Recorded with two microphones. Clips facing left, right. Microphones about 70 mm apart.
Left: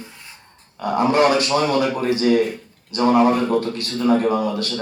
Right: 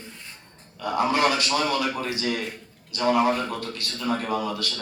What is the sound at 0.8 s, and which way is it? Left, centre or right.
A man's voice, left.